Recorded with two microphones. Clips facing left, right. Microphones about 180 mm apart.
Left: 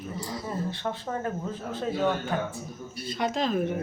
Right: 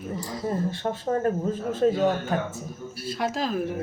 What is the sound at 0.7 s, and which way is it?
Speech, 45° right (ahead or behind).